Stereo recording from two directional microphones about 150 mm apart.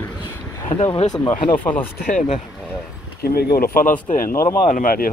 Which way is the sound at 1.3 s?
35° left (ahead or behind).